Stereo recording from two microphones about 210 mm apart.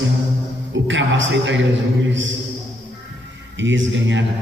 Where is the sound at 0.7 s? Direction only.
60° right (ahead or behind).